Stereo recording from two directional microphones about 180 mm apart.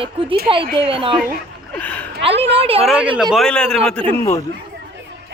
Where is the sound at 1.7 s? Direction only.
10° left (ahead or behind).